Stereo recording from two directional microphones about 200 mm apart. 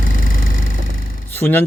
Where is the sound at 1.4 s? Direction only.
10° left (ahead or behind).